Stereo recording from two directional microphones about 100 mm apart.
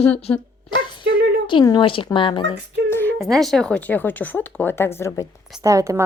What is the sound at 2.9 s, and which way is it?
Music, 20° left (ahead or behind).